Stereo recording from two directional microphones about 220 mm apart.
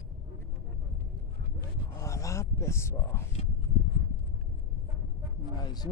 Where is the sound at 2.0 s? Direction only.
15° left (ahead or behind).